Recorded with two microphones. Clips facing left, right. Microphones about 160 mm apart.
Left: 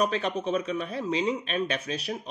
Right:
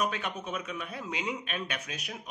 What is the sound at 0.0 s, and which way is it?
Speech, 30° left (ahead or behind).